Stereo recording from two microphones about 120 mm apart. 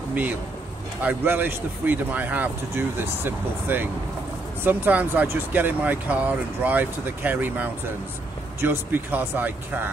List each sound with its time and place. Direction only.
1.0 s speech: 15° right (ahead or behind)